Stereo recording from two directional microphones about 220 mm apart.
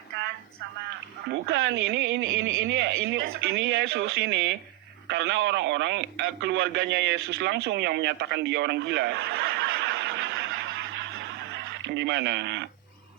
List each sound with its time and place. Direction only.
1.3 s speech: 55° right (ahead or behind)